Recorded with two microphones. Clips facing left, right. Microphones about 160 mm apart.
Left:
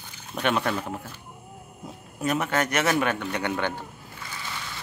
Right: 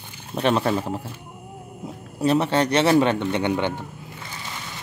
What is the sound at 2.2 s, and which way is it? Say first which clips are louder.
A man's voice: right 6 dB; 30° right (ahead or behind).